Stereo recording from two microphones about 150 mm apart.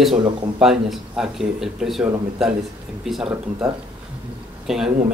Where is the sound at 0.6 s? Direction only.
Centre (ahead or behind).